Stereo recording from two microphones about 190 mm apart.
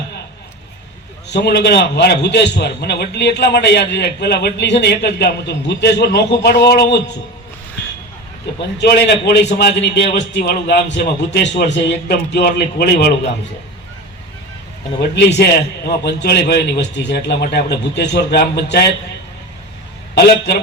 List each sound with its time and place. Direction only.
1.3 s a man's voice: 60° left (ahead or behind)
8.8 s a man's voice: 60° left (ahead or behind)
15.1 s a man's voice: 60° left (ahead or behind)